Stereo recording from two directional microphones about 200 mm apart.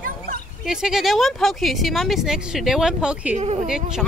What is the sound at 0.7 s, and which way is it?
Speech, centre (ahead or behind).